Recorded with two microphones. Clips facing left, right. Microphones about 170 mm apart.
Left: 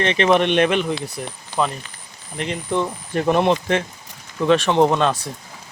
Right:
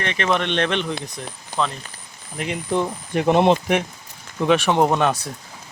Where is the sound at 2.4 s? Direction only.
10° right (ahead or behind).